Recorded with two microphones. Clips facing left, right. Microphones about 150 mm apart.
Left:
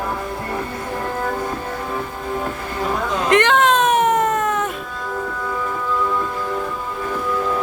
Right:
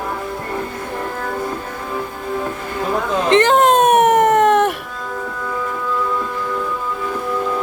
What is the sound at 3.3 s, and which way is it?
Baby cry, 35° right (ahead or behind).